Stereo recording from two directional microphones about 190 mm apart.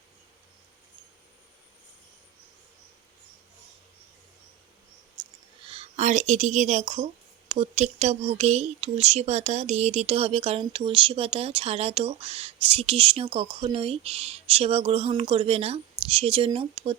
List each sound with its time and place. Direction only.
5.6 s speech: 30° right (ahead or behind)